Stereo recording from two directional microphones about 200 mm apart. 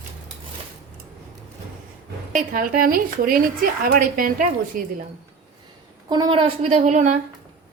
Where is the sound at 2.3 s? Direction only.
45° right (ahead or behind).